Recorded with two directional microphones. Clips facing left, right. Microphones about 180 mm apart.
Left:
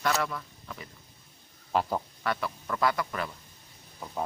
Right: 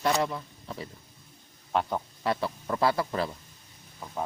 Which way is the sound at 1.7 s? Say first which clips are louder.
Even; centre (ahead or behind).